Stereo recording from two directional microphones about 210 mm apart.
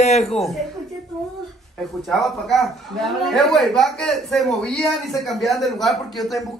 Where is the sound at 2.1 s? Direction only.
Centre (ahead or behind).